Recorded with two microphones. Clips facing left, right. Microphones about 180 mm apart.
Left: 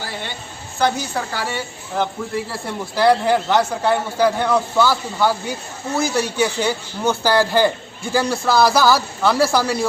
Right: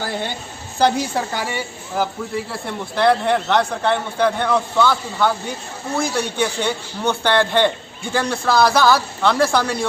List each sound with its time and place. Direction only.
0.8 s a woman's voice: 30° right (ahead or behind)
1.3 s speech: 15° right (ahead or behind)
2.3 s a man's voice: centre (ahead or behind)